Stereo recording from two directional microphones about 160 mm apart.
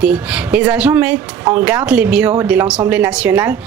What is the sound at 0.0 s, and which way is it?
A woman's voice, 10° right (ahead or behind).